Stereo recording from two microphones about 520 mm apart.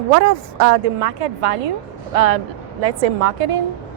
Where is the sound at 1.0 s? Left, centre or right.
Right.